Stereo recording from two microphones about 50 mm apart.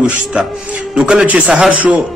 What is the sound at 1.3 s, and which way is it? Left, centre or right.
Speech, right.